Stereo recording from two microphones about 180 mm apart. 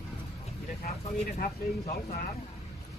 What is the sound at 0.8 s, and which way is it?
Speech, 55° left (ahead or behind).